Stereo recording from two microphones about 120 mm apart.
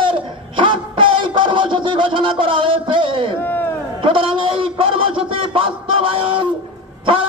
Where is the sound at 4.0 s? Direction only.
45° right (ahead or behind).